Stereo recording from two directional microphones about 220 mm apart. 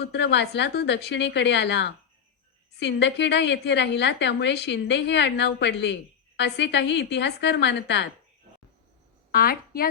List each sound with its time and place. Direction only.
0.0 s a woman's voice: 50° left (ahead or behind)
9.3 s a woman's voice: 45° left (ahead or behind)